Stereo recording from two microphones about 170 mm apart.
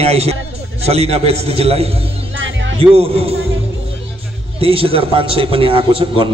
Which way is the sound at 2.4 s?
90° right.